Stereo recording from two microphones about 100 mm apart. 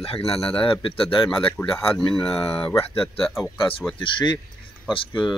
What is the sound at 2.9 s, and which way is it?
Speech, 70° left (ahead or behind).